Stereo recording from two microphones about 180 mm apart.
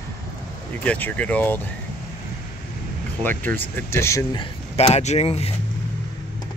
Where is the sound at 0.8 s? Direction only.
10° left (ahead or behind).